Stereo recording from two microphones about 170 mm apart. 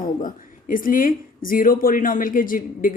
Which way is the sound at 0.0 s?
55° left (ahead or behind).